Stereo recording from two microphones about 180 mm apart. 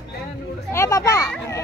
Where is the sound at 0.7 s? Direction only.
15° left (ahead or behind).